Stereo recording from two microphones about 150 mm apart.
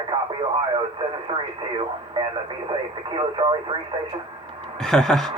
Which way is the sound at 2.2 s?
30° right (ahead or behind).